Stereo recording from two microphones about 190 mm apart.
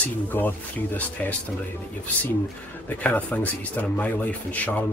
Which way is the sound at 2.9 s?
10° left (ahead or behind).